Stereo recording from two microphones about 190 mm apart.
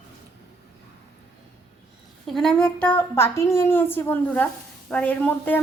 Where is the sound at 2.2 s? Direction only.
Centre (ahead or behind).